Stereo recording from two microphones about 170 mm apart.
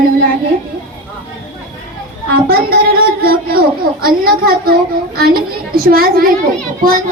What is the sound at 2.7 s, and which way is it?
A woman's voice, 60° right (ahead or behind).